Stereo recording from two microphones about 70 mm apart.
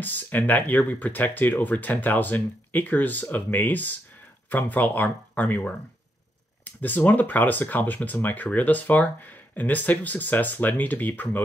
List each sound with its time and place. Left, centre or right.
0.0 s speech: left